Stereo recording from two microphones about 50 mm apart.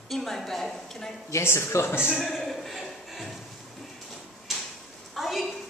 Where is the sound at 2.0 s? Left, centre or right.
Centre.